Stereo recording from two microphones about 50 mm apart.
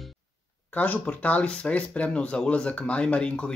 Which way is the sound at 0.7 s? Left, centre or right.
Left.